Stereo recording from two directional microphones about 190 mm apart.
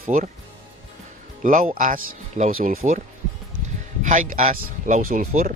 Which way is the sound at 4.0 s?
40° right (ahead or behind).